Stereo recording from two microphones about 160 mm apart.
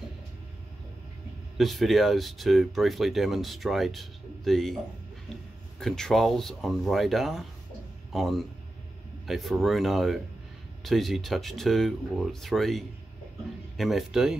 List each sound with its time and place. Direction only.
1.6 s speech: centre (ahead or behind)